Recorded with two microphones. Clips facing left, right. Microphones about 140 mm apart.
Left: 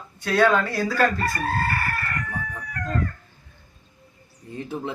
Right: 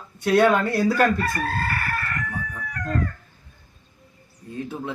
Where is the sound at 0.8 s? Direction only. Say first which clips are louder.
Right 2 dB; 20° right (ahead or behind).